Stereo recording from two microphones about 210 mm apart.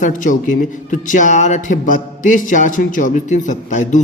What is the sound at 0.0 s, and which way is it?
Speech, 40° left (ahead or behind).